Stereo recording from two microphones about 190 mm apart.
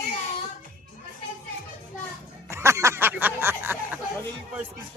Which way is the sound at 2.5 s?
15° right (ahead or behind).